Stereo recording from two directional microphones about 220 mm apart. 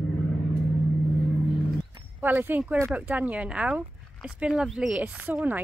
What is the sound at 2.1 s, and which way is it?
Speech, 10° right (ahead or behind).